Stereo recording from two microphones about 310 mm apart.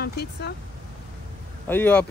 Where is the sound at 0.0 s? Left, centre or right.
Left.